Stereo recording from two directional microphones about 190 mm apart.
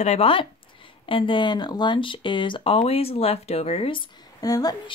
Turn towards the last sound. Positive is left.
turn(degrees=20)  # may be behind; listen again after turning